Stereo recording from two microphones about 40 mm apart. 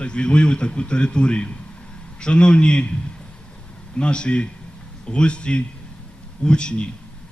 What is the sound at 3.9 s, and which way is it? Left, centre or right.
A man's voice, left.